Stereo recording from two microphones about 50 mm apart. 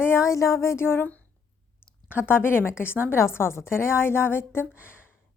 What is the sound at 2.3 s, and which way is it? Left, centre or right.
A woman's voice, left.